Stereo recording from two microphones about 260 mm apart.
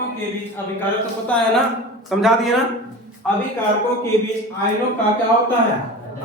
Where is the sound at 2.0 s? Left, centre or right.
Centre.